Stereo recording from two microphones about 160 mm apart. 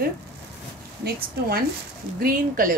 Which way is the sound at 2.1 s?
60° right (ahead or behind).